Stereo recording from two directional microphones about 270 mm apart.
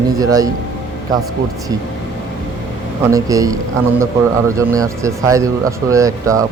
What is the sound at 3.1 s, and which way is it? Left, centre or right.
Speech, centre.